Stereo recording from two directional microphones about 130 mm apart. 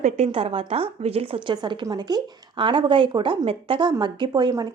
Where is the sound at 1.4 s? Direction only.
35° right (ahead or behind).